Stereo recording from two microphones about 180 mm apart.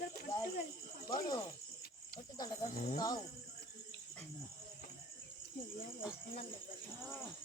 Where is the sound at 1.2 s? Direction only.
20° left (ahead or behind).